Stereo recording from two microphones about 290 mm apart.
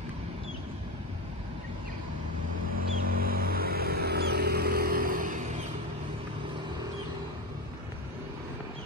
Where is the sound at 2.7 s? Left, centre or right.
Right.